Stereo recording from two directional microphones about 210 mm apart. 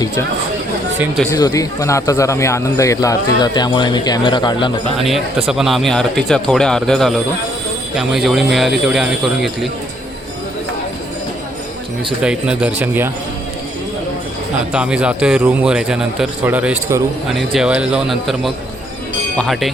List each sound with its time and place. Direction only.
0.9 s a man's voice: 5° right (ahead or behind)
1.3 s speech: 15° left (ahead or behind)
5.5 s a man's voice: centre (ahead or behind)
12.2 s a man's voice: 5° right (ahead or behind)
14.7 s a man's voice: 5° right (ahead or behind)